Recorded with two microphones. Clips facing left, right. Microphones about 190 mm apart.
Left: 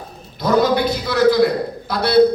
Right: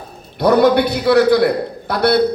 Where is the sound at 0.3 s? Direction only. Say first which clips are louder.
Right 4 dB; 65° right (ahead or behind).